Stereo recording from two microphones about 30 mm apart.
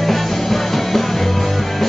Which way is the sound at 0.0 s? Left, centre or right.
Centre.